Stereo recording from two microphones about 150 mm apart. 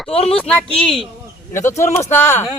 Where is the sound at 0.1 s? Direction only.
40° left (ahead or behind).